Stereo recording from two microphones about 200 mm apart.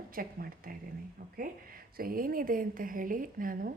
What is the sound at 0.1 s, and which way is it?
Speech, 45° right (ahead or behind).